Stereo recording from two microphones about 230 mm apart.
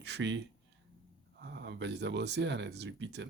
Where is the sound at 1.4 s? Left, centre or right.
Right.